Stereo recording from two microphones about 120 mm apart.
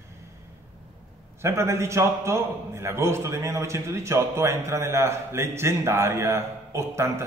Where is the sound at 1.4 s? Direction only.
25° right (ahead or behind).